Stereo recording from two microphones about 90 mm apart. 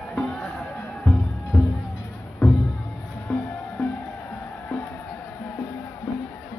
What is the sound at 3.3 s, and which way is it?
Music, 10° left (ahead or behind).